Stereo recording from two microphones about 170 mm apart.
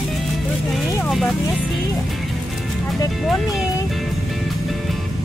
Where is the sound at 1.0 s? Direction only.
Centre (ahead or behind).